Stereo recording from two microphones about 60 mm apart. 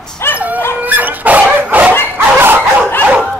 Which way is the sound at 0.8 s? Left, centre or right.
Right.